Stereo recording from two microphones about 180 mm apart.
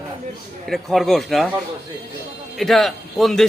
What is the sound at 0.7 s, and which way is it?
Speech, centre (ahead or behind).